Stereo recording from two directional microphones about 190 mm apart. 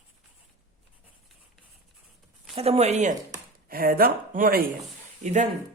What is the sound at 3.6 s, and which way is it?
Speech, 50° right (ahead or behind).